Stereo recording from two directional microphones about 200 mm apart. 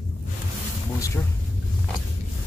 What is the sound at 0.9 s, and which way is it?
Speech, 15° left (ahead or behind).